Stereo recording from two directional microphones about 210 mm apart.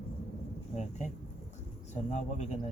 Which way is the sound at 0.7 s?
35° left (ahead or behind).